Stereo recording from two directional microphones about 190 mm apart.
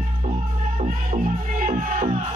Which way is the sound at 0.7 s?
40° right (ahead or behind).